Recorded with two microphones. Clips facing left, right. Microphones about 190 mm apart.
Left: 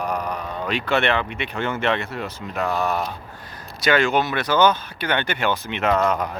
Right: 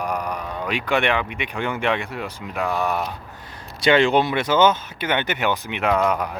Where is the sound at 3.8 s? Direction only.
30° right (ahead or behind).